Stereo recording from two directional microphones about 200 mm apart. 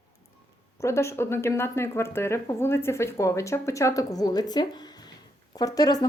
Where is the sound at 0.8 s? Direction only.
15° left (ahead or behind).